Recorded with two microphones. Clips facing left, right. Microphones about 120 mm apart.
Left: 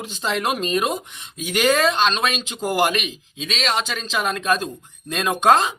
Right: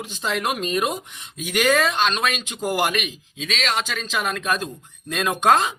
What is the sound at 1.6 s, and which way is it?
Speech, 25° left (ahead or behind).